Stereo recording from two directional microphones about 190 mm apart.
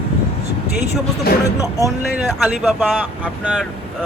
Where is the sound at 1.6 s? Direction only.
15° left (ahead or behind).